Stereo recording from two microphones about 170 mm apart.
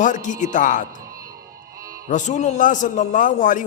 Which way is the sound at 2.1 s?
45° left (ahead or behind).